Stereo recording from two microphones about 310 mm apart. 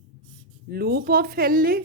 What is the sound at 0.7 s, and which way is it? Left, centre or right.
Speech, right.